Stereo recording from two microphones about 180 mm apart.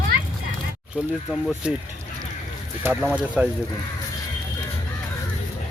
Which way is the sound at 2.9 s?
10° right (ahead or behind).